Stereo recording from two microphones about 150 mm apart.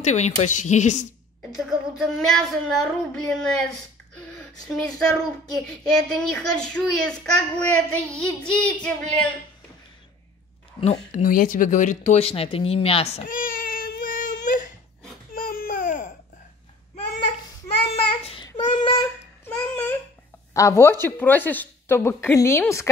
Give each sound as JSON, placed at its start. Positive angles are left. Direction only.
{"t": 0.0, "sound": "speech", "side_deg": 50}
{"t": 1.7, "sound": "a sound", "side_deg": 0}
{"t": 5.7, "sound": "a child's voice", "side_deg": 5}
{"t": 10.8, "sound": "speech", "side_deg": 45}
{"t": 11.2, "sound": "speech", "side_deg": 65}
{"t": 13.2, "sound": "baby cry", "side_deg": 70}
{"t": 15.3, "sound": "a sound", "side_deg": 80}
{"t": 17.8, "sound": "child singing", "side_deg": 40}
{"t": 19.4, "sound": "babbling", "side_deg": 15}
{"t": 20.5, "sound": "a child's voice", "side_deg": 20}